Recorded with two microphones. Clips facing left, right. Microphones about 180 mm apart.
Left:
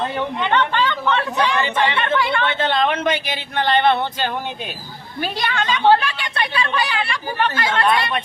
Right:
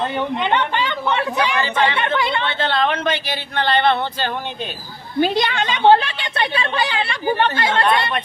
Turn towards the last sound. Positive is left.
turn(degrees=-25)  # may be behind; listen again after turning